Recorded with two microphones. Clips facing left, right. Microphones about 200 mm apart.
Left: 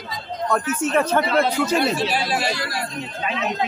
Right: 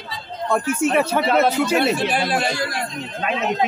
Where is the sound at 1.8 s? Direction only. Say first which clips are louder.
Right 2 dB; 55° right (ahead or behind).